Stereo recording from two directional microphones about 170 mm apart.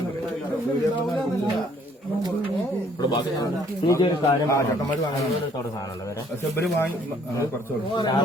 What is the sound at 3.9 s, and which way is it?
Speech, 20° left (ahead or behind).